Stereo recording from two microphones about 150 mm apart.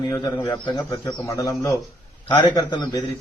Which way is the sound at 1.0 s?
20° left (ahead or behind).